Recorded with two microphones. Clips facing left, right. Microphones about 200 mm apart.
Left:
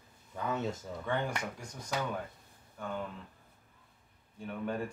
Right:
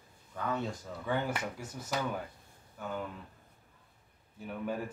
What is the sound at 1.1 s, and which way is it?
Speech, 5° right (ahead or behind).